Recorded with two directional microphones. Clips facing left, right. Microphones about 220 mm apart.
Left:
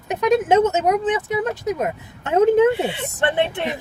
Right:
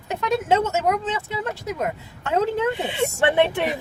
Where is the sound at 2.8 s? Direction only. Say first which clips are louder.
Right 1 dB; 15° right (ahead or behind).